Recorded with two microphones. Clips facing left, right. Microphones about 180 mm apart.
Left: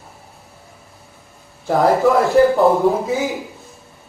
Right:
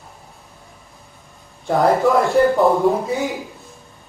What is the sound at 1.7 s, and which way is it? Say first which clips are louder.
A man's voice: left 1 dB; centre (ahead or behind).